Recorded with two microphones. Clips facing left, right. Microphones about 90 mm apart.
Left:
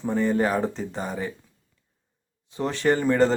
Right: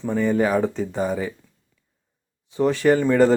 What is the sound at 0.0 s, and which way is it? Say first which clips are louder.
A man's voice: right 2 dB; centre (ahead or behind).